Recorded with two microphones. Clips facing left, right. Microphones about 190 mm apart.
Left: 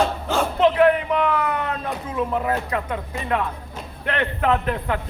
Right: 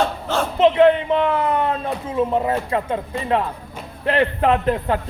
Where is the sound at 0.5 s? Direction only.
20° right (ahead or behind).